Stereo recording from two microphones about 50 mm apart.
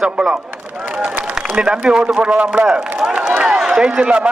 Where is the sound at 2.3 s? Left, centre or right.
Right.